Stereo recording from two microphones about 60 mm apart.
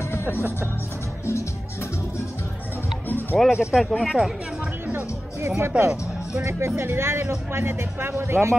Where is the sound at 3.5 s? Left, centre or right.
Centre.